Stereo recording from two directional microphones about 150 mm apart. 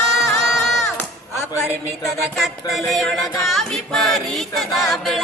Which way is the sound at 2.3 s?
Centre (ahead or behind).